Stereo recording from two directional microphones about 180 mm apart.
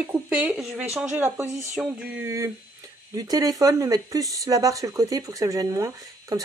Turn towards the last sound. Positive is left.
turn(degrees=-20)  # may be behind; listen again after turning